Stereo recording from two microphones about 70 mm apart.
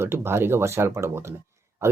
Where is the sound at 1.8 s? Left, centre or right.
Right.